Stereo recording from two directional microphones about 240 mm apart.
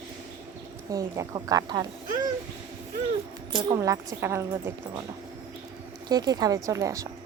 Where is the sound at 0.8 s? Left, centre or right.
Centre.